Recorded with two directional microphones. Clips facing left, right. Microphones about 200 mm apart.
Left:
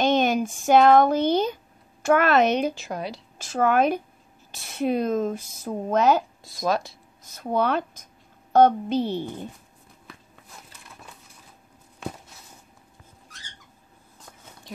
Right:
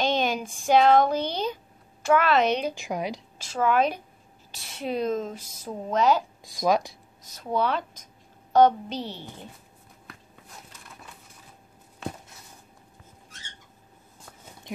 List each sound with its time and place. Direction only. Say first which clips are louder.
0.0 s speech: left 5 dB; 50° left (ahead or behind)
2.7 s a woman's voice: right 1 dB; 15° right (ahead or behind)
3.3 s speech: left 3 dB; 50° left (ahead or behind)
6.4 s a woman's voice: right 2 dB; 15° right (ahead or behind)
7.3 s speech: left 3 dB; 50° left (ahead or behind)